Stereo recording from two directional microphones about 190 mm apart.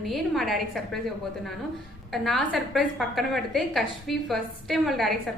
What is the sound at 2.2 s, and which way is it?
A woman's voice, centre (ahead or behind).